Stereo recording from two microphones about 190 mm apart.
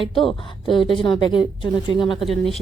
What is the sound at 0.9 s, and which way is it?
A woman's voice, 25° left (ahead or behind).